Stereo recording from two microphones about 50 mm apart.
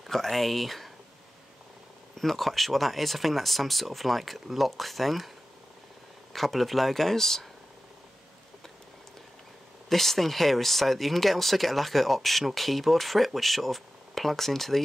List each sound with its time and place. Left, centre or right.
0.0 s speech: centre
2.1 s speech: centre
6.3 s speech: centre
9.8 s speech: centre